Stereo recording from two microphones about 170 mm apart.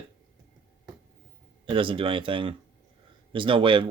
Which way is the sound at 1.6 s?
30° right (ahead or behind).